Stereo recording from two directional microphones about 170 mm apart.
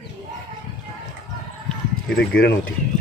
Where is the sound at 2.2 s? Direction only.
75° left (ahead or behind).